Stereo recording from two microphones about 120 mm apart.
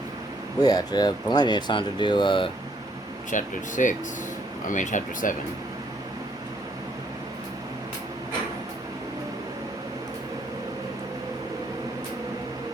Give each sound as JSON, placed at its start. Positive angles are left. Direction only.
{"t": 0.6, "sound": "speech", "side_deg": 30}
{"t": 3.3, "sound": "speech", "side_deg": 90}